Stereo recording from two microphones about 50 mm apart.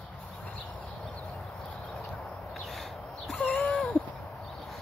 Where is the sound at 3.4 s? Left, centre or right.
Left.